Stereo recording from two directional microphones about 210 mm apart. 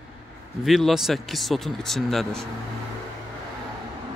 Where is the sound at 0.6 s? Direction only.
Centre (ahead or behind).